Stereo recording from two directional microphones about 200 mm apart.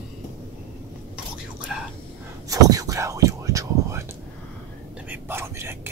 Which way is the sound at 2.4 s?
20° right (ahead or behind).